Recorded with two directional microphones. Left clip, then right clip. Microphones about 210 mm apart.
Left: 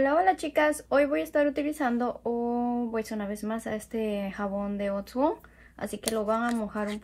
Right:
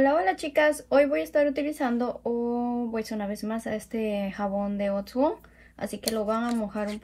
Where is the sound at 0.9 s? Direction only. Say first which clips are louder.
Right 2 dB; 10° left (ahead or behind).